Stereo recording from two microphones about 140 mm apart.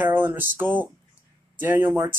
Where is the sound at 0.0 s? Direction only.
15° right (ahead or behind).